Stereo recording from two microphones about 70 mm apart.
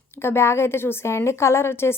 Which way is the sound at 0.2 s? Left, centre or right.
Left.